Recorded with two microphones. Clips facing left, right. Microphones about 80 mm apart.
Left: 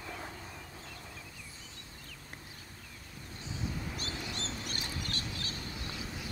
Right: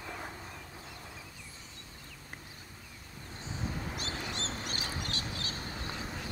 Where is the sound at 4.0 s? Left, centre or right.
Right.